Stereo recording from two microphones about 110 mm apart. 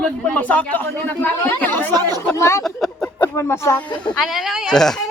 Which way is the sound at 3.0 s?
20° left (ahead or behind).